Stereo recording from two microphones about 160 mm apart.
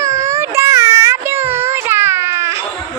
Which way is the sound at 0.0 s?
20° right (ahead or behind).